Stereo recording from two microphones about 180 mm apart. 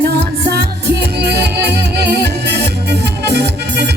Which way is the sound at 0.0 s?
65° right (ahead or behind).